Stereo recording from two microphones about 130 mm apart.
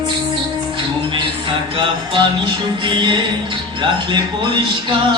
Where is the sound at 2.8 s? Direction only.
35° right (ahead or behind).